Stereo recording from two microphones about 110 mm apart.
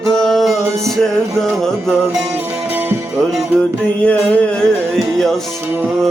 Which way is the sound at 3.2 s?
5° left (ahead or behind).